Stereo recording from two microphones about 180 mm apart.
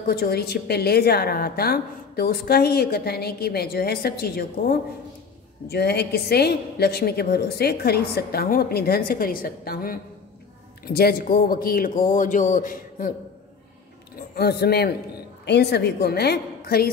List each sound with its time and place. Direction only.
0.0 s a woman's voice: 55° left (ahead or behind)
14.3 s a woman's voice: 65° left (ahead or behind)